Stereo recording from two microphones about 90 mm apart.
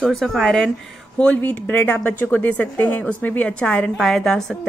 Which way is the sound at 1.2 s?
15° left (ahead or behind).